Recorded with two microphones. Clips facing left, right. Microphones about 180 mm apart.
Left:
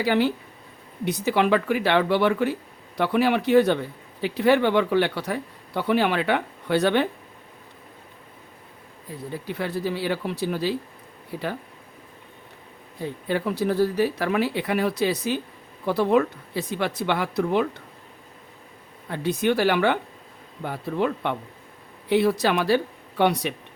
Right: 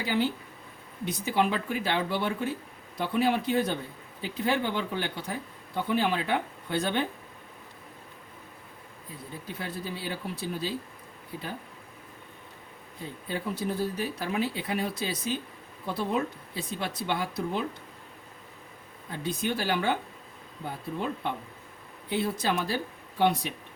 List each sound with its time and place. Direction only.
0.0 s a man's voice: 70° left (ahead or behind)
9.3 s a man's voice: 70° left (ahead or behind)
13.0 s a man's voice: 75° left (ahead or behind)
19.0 s a man's voice: 70° left (ahead or behind)